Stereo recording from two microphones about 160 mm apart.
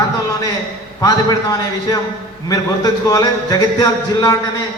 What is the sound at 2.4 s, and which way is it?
Speech, 25° left (ahead or behind).